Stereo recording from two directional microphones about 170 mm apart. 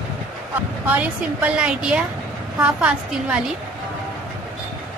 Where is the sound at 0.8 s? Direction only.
10° right (ahead or behind).